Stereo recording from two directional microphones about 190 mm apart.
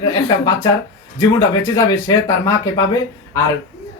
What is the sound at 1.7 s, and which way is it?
Speech, 15° left (ahead or behind).